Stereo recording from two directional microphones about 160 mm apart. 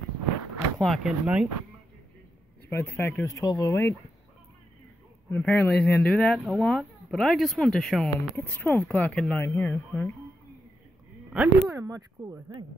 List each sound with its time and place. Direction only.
0.7 s speech: centre (ahead or behind)
2.7 s speech: 15° left (ahead or behind)
5.3 s speech: 10° left (ahead or behind)
11.3 s speech: 10° right (ahead or behind)
11.8 s speech: 20° right (ahead or behind)